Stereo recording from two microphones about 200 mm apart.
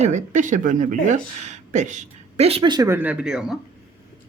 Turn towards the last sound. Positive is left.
turn(degrees=-5)  # may be behind; listen again after turning